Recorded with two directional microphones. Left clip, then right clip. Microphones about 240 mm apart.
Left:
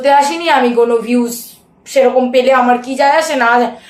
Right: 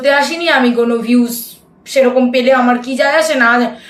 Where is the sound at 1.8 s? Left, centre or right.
Centre.